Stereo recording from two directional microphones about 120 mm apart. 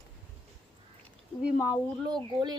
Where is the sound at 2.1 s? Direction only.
35° right (ahead or behind).